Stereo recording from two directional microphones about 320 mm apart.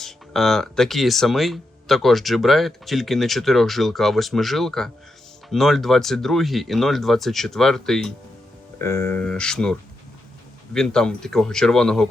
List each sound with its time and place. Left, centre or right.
0.0 s speech: centre
10.8 s speech: centre